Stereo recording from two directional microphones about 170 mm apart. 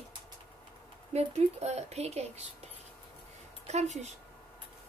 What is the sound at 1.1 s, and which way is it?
A woman's voice, 40° right (ahead or behind).